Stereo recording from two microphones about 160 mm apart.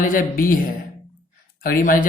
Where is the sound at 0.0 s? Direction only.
60° left (ahead or behind).